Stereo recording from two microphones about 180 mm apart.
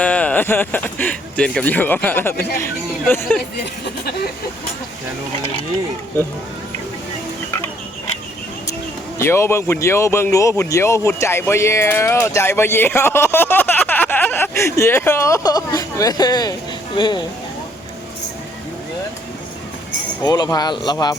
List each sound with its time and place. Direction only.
0.0 s speech: 5° left (ahead or behind)
3.8 s speech: 65° left (ahead or behind)
9.1 s speech: 15° left (ahead or behind)
20.2 s speech: 25° left (ahead or behind)